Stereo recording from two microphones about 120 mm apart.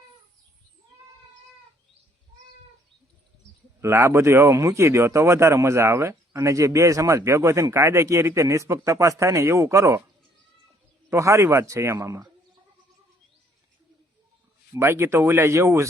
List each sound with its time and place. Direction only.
3.8 s speech: 25° right (ahead or behind)
11.1 s speech: 25° right (ahead or behind)
14.7 s speech: 20° right (ahead or behind)